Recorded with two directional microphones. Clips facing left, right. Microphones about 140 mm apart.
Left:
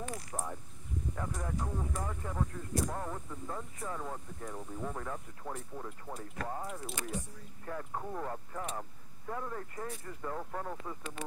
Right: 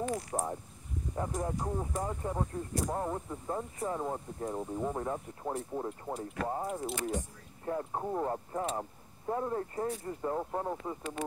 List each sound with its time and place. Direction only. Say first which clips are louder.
0.1 s speech: right 6 dB; 30° right (ahead or behind)